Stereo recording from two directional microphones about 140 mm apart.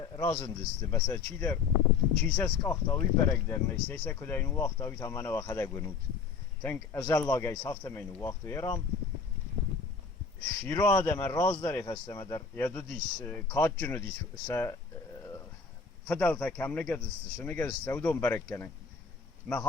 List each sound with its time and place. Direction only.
0.2 s speech: 20° left (ahead or behind)
10.7 s speech: 25° left (ahead or behind)
16.0 s speech: 10° left (ahead or behind)